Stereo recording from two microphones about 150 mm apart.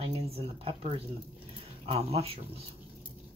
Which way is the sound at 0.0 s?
40° right (ahead or behind).